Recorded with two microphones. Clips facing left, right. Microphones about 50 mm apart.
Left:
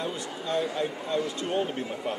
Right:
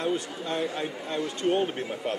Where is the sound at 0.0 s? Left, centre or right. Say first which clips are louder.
Right 4 dB; right.